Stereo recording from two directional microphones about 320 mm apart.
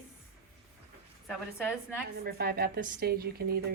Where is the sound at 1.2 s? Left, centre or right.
Centre.